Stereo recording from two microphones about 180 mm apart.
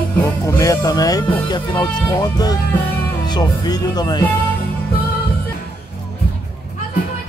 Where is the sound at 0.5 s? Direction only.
20° left (ahead or behind).